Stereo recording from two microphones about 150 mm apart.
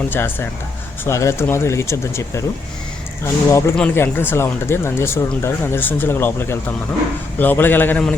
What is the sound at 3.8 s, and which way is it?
Speech, 15° left (ahead or behind).